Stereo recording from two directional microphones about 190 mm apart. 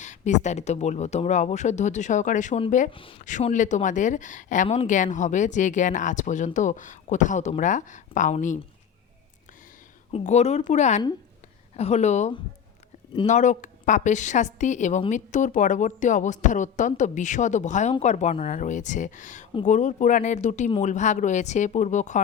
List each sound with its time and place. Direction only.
0.0 s speech: 40° left (ahead or behind)
2.9 s a woman's voice: 25° left (ahead or behind)
3.2 s speech: 40° left (ahead or behind)
10.1 s speech: 35° left (ahead or behind)